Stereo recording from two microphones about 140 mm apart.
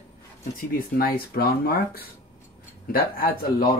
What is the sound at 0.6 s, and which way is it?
Speech, 90° left.